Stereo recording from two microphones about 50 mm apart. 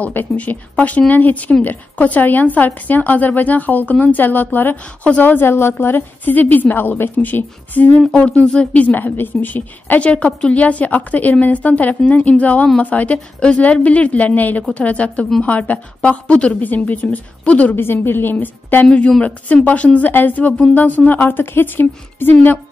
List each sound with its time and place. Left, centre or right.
0.0 s speech: left
10.0 s a woman's voice: left
16.6 s speech: left
17.7 s a woman's voice: left
18.9 s speech: centre
19.2 s a woman's voice: left
20.1 s speech: left